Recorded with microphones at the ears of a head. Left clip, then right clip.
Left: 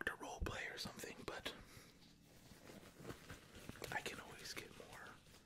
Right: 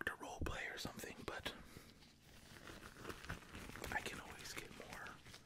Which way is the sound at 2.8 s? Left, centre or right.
Right.